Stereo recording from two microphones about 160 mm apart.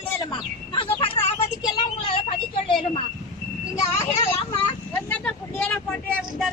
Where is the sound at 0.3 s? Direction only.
35° left (ahead or behind).